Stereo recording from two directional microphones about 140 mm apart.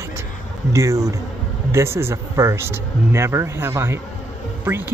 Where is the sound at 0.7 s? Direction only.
20° right (ahead or behind).